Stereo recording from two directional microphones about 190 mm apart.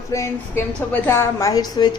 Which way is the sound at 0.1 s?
15° left (ahead or behind).